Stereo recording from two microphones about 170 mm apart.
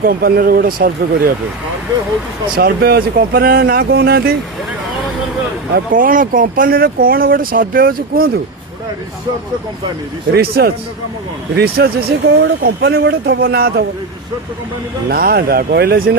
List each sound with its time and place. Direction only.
0.0 s speech: 60° right (ahead or behind)
2.6 s speech: 65° right (ahead or behind)
5.7 s speech: 55° right (ahead or behind)
10.3 s speech: 65° right (ahead or behind)
15.1 s speech: 65° right (ahead or behind)